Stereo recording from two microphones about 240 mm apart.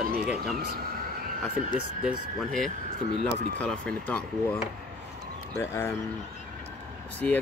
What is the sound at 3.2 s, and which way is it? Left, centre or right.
Speech, centre.